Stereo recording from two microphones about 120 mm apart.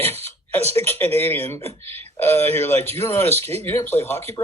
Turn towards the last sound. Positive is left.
turn(degrees=20)  # may be behind; listen again after turning